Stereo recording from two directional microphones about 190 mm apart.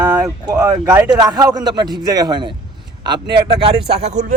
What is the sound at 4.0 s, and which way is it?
Speech, 40° right (ahead or behind).